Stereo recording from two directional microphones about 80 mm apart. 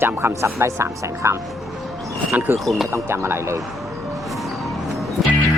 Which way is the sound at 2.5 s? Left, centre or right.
Centre.